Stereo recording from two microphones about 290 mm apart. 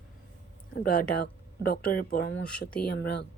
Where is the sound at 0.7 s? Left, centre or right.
Left.